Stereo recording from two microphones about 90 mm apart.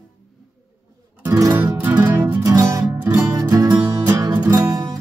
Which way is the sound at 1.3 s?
40° right (ahead or behind).